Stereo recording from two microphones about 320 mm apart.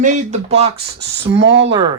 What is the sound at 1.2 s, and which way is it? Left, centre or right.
Speech, right.